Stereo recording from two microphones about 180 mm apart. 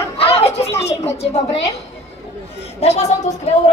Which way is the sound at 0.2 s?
35° left (ahead or behind).